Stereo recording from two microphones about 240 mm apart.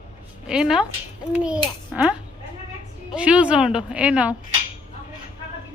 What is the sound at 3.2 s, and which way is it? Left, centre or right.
A woman's voice, centre.